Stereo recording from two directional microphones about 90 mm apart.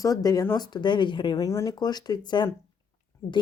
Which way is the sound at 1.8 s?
50° left (ahead or behind).